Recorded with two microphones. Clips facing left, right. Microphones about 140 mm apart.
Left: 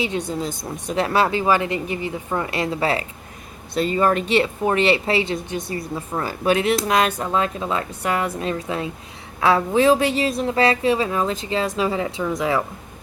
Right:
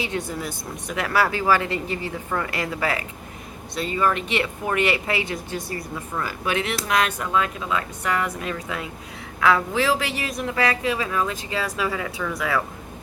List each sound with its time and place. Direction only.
0.0 s a woman's voice: 20° left (ahead or behind)
3.8 s a woman's voice: 35° left (ahead or behind); by 5.8 s 20° left (ahead or behind)
6.1 s a woman's voice: 35° left (ahead or behind)